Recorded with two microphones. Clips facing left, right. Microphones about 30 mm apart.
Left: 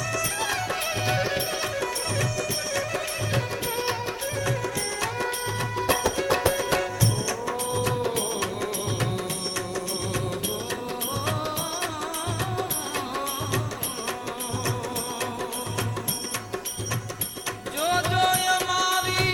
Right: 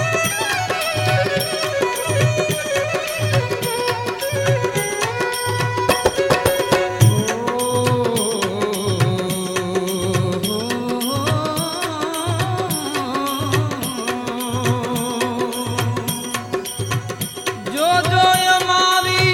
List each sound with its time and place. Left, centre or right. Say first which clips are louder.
0.1 s music: right 8 dB; right
1.8 s music: right 9 dB; right
5.8 s music: right 7 dB; right
17.7 s music: right 8 dB; right